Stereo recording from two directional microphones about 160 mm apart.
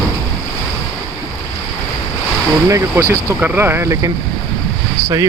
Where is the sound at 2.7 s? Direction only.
20° right (ahead or behind).